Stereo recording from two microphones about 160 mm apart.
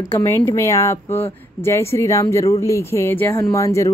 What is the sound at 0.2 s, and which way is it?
A woman's voice, 20° left (ahead or behind).